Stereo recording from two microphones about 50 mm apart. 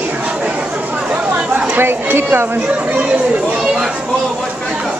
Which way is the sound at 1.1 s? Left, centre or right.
Right.